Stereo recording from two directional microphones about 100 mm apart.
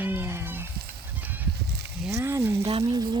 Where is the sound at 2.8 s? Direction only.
45° right (ahead or behind).